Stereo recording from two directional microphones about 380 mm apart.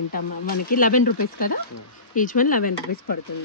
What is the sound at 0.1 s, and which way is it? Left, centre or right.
Speech, left.